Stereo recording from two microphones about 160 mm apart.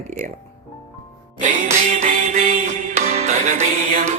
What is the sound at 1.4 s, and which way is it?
A woman's voice, 50° right (ahead or behind).